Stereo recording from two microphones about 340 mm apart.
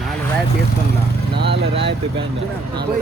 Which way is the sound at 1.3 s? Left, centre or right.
Right.